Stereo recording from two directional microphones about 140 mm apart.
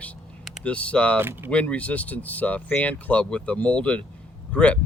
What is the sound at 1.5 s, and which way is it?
Speech, 10° left (ahead or behind).